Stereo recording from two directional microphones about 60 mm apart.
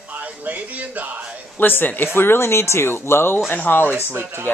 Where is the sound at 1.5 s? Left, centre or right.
Left.